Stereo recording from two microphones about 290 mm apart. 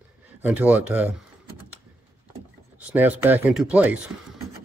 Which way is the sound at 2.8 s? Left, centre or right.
Centre.